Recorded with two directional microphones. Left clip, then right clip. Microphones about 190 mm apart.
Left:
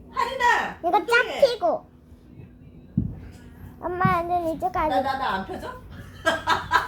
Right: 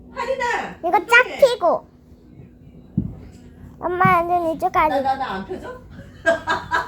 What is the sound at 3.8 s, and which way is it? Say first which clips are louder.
Child singing: right 7 dB; 25° right (ahead or behind).